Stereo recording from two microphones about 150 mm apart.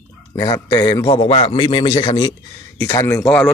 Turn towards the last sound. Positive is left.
turn(degrees=5)  # may be behind; listen again after turning